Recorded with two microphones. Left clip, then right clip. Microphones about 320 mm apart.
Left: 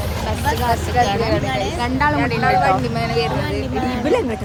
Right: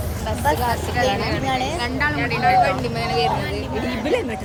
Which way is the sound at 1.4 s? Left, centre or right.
Centre.